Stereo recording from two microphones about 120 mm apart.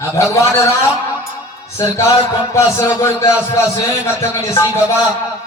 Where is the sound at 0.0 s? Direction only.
25° left (ahead or behind).